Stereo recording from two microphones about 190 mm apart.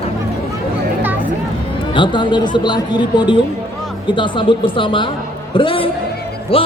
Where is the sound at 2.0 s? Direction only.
25° left (ahead or behind).